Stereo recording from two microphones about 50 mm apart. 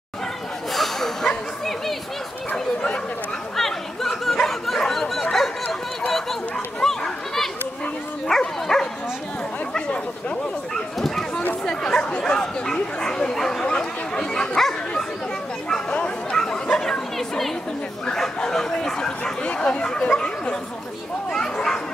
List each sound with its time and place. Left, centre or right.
0.7 s a sound: centre
3.5 s a sound: centre
8.3 s dog: centre
9.8 s chatter: left
10.7 s dog: centre
11.6 s bow-wow: centre
15.9 s chatter: left
18.2 s bow-wow: centre
19.5 s chatter: left
19.8 s speech: centre
21.3 s children playing: centre